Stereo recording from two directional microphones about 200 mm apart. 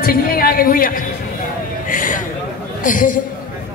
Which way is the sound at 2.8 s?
40° left (ahead or behind).